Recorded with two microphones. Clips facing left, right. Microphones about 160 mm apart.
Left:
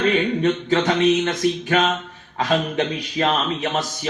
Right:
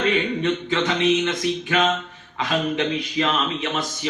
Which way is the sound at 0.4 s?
45° left (ahead or behind).